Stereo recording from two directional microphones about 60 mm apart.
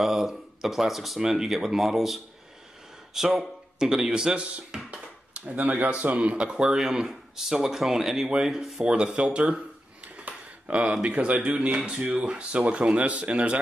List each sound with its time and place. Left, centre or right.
0.0 s speech: centre
4.9 s dishes: right
6.1 s speech: centre
8.8 s speech: centre